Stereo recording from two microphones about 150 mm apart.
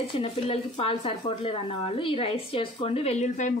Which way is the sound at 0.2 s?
40° left (ahead or behind).